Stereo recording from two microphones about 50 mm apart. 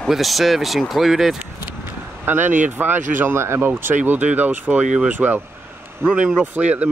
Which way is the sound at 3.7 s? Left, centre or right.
Right.